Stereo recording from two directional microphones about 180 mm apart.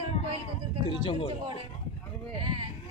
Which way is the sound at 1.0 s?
30° left (ahead or behind).